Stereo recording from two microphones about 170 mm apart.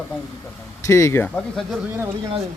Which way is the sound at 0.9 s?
15° left (ahead or behind).